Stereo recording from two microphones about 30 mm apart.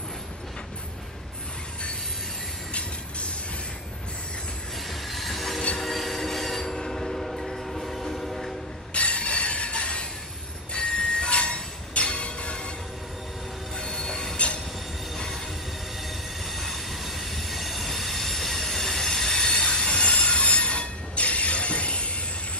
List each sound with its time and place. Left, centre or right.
4.8 s train wheels squealing: centre
5.8 s train: centre
8.9 s a sound: left
10.7 s train: left
13.7 s train wheels squealing: left
15.1 s train: centre
16.1 s train: centre
19.6 s train wheels squealing: left